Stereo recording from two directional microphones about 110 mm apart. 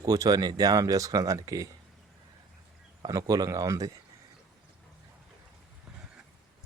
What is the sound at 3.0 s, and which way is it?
Speech, 35° right (ahead or behind).